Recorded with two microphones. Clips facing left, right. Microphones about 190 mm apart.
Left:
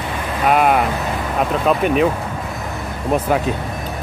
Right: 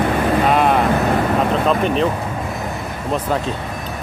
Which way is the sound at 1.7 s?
5° left (ahead or behind).